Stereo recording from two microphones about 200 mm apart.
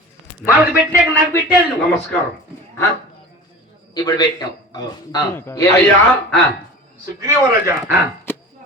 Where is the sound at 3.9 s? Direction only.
20° left (ahead or behind).